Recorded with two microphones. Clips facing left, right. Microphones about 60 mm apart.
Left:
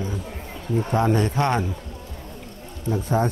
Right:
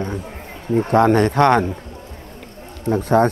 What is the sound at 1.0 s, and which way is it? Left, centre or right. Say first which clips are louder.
Speech: right 8 dB; right.